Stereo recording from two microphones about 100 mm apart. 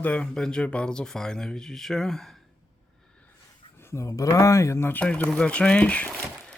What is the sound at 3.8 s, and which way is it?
Speech, 30° left (ahead or behind).